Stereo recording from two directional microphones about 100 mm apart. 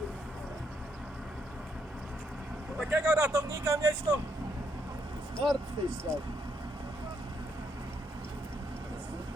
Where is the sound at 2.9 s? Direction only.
30° right (ahead or behind).